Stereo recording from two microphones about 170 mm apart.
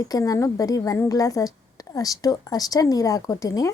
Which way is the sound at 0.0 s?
20° left (ahead or behind).